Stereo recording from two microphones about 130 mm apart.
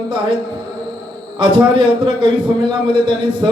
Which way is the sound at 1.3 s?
40° right (ahead or behind).